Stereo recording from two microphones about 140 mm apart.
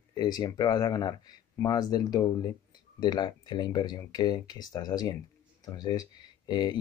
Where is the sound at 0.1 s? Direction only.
30° left (ahead or behind).